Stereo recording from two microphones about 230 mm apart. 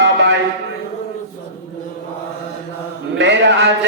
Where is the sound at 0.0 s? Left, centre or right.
Right.